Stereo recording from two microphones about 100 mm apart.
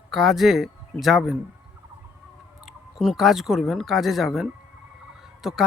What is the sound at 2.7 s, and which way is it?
A man's voice, 5° right (ahead or behind).